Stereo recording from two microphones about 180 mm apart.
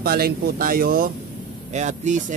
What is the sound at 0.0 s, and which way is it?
Speech, 55° right (ahead or behind).